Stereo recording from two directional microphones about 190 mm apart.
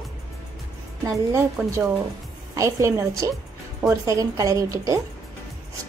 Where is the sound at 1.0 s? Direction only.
15° right (ahead or behind).